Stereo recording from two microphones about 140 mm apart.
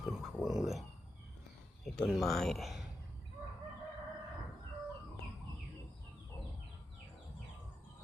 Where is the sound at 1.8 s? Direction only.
5° left (ahead or behind).